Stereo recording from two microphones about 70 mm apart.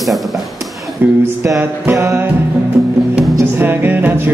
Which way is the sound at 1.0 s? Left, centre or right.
Right.